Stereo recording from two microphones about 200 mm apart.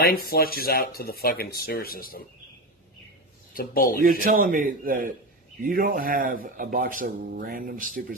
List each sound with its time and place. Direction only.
0.0 s speech: 50° left (ahead or behind)
3.5 s speech: 45° left (ahead or behind)
4.0 s speech: 45° right (ahead or behind)